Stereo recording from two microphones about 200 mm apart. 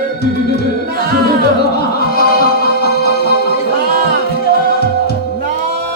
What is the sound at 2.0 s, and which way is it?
Music, 50° left (ahead or behind).